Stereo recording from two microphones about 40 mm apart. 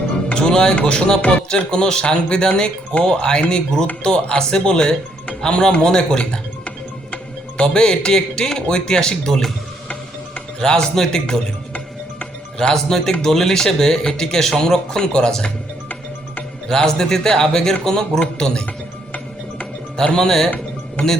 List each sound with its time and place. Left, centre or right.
0.3 s speech: left
10.6 s speech: left
12.5 s speech: centre
16.6 s speech: centre
20.1 s speech: centre